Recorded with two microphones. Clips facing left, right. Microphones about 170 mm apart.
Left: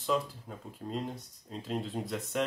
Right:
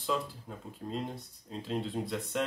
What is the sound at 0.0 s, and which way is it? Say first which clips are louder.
Speech: left 2 dB; centre (ahead or behind).